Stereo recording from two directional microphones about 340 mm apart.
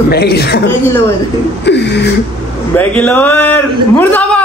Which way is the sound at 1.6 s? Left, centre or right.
Left.